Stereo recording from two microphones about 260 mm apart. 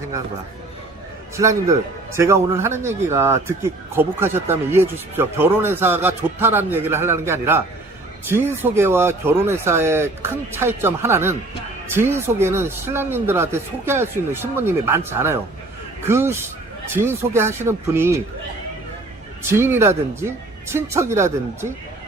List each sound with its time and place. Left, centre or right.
1.4 s speech: centre
19.4 s speech: centre